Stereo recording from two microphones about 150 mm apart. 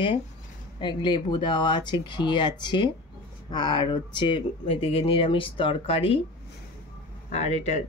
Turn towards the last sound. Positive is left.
turn(degrees=45)  # may be behind; listen again after turning